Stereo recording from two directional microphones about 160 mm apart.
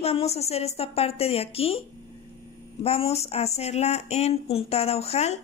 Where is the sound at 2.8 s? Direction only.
40° left (ahead or behind).